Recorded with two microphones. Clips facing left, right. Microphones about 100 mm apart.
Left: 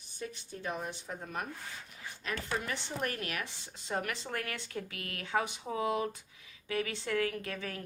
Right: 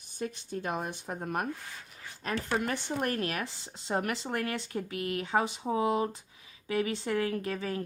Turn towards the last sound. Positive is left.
turn(degrees=-25)  # may be behind; listen again after turning